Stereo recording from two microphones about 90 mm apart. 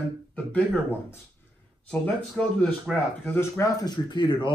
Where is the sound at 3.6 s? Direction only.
50° left (ahead or behind).